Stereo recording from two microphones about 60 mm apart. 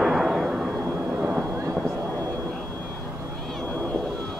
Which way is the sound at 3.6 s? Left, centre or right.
Centre.